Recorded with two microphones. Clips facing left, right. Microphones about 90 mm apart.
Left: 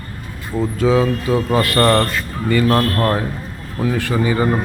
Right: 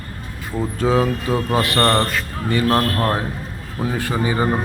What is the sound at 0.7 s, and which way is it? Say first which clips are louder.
Speech: left 2 dB; 40° right (ahead or behind).